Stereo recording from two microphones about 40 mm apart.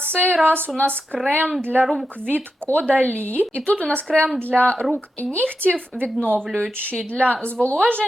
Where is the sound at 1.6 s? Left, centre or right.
Right.